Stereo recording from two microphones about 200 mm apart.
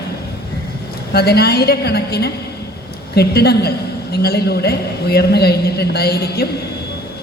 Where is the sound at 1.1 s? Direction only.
55° left (ahead or behind).